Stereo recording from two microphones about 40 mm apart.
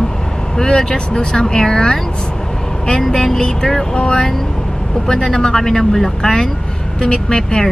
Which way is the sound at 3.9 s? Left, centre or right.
Left.